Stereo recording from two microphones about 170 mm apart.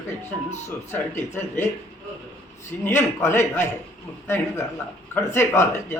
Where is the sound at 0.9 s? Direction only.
15° left (ahead or behind).